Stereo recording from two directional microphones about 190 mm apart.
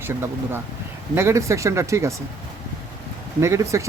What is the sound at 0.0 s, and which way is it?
Speech, 15° right (ahead or behind).